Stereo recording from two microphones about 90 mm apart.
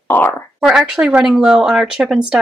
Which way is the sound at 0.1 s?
20° left (ahead or behind).